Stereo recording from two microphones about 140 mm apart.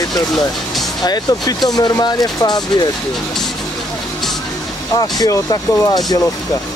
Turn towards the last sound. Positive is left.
turn(degrees=30)  # may be behind; listen again after turning